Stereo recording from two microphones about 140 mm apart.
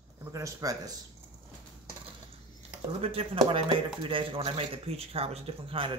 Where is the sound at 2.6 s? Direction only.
45° right (ahead or behind).